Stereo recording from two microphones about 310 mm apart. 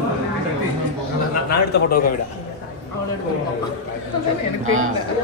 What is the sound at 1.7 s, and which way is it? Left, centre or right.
Speech, left.